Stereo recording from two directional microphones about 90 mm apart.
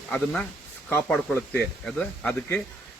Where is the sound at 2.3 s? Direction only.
20° left (ahead or behind).